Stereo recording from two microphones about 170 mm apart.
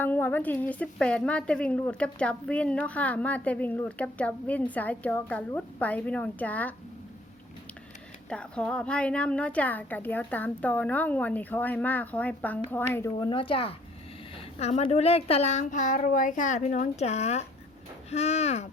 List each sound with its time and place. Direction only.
0.0 s a woman's voice: 10° left (ahead or behind)
8.3 s a woman's voice: 5° left (ahead or behind)
13.1 s a woman's voice: 30° left (ahead or behind)